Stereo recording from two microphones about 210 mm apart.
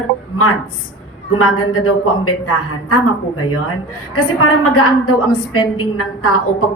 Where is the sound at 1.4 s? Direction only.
90° left.